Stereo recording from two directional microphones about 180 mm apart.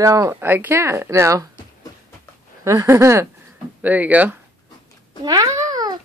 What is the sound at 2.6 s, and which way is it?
Speech, 15° right (ahead or behind).